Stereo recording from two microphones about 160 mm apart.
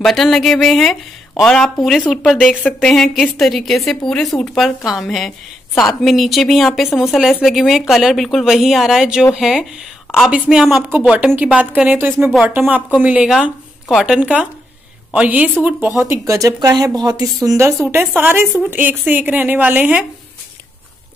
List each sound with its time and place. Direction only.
0.0 s a woman's voice: centre (ahead or behind)